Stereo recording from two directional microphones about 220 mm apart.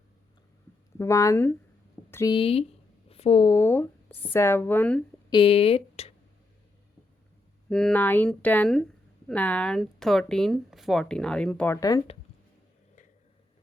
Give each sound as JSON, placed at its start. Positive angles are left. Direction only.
{"t": 0.9, "sound": "speech", "side_deg": 15}
{"t": 2.0, "sound": "a sound", "side_deg": 10}
{"t": 2.3, "sound": "speech", "side_deg": 25}
{"t": 3.5, "sound": "speech", "side_deg": 10}
{"t": 5.3, "sound": "speech", "side_deg": 25}
{"t": 7.7, "sound": "speech", "side_deg": 5}